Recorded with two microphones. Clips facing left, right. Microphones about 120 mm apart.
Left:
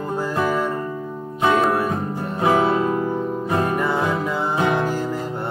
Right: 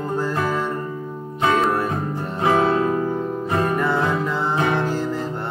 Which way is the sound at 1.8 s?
10° left (ahead or behind).